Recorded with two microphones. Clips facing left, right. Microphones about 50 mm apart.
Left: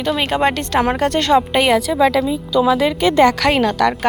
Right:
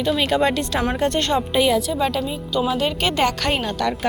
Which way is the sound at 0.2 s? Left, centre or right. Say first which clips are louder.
Left 3 dB; left.